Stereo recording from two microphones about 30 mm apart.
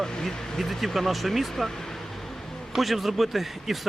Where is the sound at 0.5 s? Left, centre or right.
Centre.